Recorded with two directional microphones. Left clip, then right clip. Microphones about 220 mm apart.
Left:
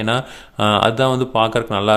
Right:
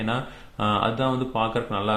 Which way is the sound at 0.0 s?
45° left (ahead or behind).